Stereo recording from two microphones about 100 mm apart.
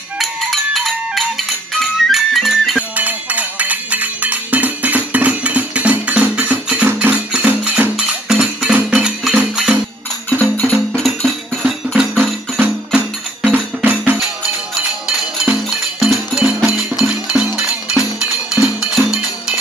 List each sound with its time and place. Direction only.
0.2 s music: centre (ahead or behind)
3.0 s music: 15° right (ahead or behind)
10.3 s music: 15° left (ahead or behind)
10.9 s music: centre (ahead or behind)
12.5 s music: 15° right (ahead or behind)
15.0 s music: 10° right (ahead or behind)